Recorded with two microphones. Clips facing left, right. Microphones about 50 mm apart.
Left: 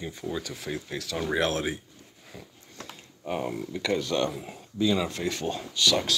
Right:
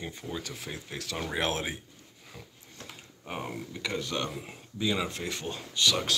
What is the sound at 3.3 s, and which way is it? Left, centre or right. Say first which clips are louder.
Speech: left 6 dB; centre.